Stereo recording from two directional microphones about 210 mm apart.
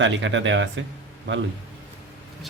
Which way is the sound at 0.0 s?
60° right (ahead or behind).